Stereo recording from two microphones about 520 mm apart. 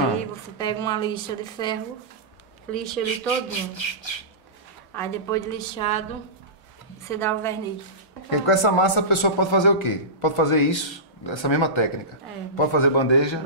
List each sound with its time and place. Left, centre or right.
0.6 s a woman's voice: centre
3.4 s a man's voice: left
4.9 s a woman's voice: centre
7.1 s a woman's voice: centre
8.3 s a man's voice: left